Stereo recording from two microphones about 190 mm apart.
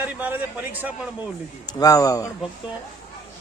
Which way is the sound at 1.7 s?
20° left (ahead or behind).